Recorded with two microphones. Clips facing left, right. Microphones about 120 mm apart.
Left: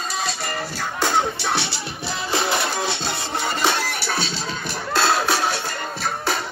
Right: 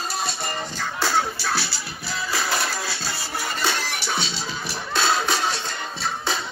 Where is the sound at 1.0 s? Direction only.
20° left (ahead or behind).